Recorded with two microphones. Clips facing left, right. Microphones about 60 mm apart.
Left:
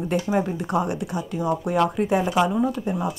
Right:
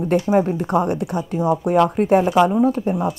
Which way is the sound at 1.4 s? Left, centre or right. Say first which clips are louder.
Right 5 dB; right.